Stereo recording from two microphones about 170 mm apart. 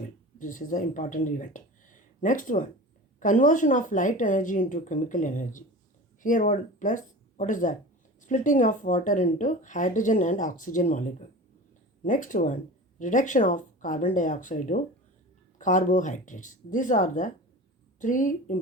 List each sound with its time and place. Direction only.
0.3 s speech: 50° left (ahead or behind)